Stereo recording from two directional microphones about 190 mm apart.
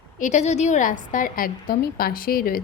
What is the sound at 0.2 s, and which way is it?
A woman's voice, 40° left (ahead or behind).